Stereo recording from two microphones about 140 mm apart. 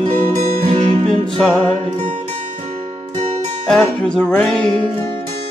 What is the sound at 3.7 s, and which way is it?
Music, 5° left (ahead or behind).